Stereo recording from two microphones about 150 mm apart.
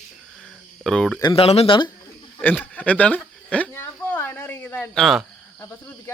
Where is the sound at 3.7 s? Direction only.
15° left (ahead or behind).